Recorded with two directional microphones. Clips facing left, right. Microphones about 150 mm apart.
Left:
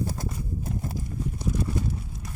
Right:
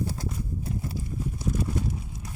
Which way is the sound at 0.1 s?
45° left (ahead or behind).